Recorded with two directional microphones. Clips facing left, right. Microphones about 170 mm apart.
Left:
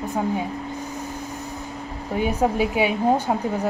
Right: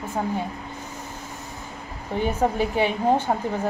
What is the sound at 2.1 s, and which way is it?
A woman's voice, 10° left (ahead or behind).